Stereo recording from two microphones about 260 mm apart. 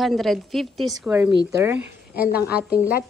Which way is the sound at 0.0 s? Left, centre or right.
Centre.